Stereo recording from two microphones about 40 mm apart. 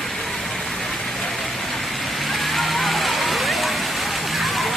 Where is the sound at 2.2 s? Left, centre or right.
Centre.